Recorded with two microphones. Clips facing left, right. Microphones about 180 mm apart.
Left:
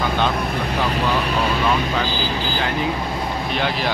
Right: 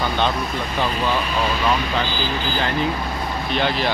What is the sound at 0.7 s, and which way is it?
Speech, 65° left (ahead or behind).